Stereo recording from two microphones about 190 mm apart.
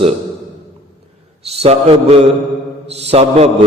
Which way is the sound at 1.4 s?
35° right (ahead or behind).